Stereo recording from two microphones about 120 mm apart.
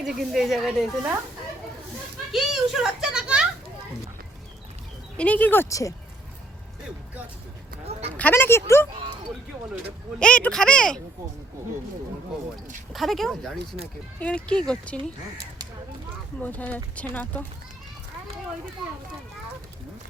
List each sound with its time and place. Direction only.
0.0 s speech: 5° right (ahead or behind)
2.3 s speech: 5° right (ahead or behind)
5.1 s speech: 10° left (ahead or behind); by 5.9 s 25° left (ahead or behind)
8.1 s speech: 15° left (ahead or behind)
10.2 s speech: 10° left (ahead or behind)
12.9 s speech: centre (ahead or behind)
16.4 s speech: 15° left (ahead or behind)